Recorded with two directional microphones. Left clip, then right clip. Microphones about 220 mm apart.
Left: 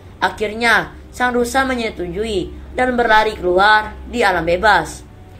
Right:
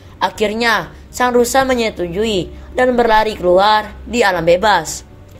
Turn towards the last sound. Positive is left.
turn(degrees=-40)  # may be behind; listen again after turning